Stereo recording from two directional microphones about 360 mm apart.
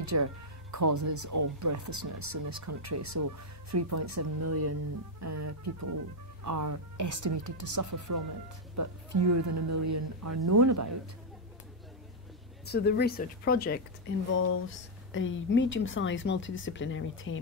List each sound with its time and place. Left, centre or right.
0.0 s speech: right
12.6 s speech: left